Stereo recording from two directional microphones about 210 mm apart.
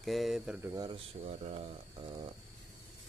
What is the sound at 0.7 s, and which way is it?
Speech, 20° right (ahead or behind).